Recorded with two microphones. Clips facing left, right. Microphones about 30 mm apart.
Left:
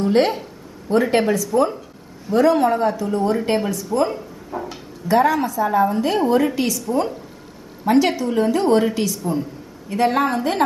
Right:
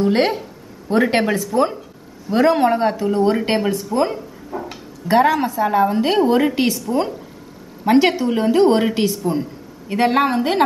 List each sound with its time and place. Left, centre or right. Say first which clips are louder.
0.0 s speech: even; right
1.3 s a woman's voice: even; right
4.5 s a sound: even; centre
5.0 s a woman's voice: right 2 dB; right